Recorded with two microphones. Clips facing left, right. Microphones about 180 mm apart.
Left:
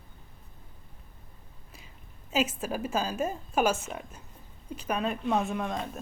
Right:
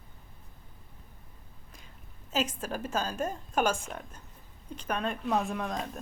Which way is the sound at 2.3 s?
5° left (ahead or behind).